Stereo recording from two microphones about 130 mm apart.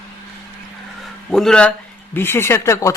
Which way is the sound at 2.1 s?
15° left (ahead or behind).